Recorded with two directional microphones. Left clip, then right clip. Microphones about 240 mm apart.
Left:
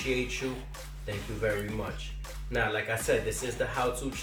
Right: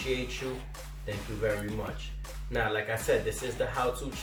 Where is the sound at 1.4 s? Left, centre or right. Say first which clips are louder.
Even; centre.